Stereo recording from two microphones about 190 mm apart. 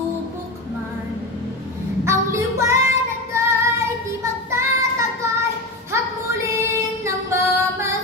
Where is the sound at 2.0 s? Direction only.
15° right (ahead or behind).